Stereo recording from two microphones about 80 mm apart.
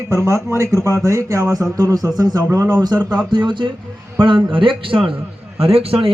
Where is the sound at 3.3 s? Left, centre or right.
Right.